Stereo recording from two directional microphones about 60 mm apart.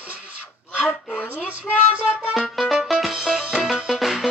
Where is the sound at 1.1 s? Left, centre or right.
Left.